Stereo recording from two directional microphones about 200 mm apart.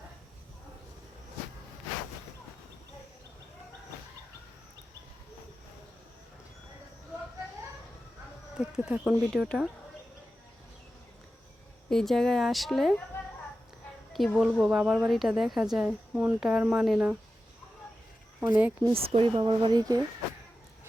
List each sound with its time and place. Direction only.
8.5 s a woman's voice: 5° right (ahead or behind)
11.9 s a woman's voice: centre (ahead or behind)
14.1 s a woman's voice: centre (ahead or behind)
18.3 s speech: 10° right (ahead or behind)
18.9 s speech: 30° right (ahead or behind)